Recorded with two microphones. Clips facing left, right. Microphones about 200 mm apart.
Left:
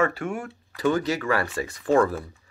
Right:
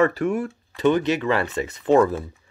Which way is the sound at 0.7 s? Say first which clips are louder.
Right 4 dB; 20° right (ahead or behind).